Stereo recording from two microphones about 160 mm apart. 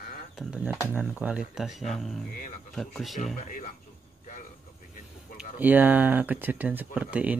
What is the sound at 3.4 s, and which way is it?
Speech, 50° left (ahead or behind).